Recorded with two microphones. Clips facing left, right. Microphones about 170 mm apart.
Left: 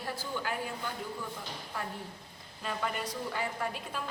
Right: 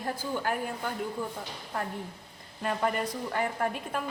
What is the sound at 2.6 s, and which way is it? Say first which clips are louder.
A woman's voice: right 6 dB; 50° right (ahead or behind).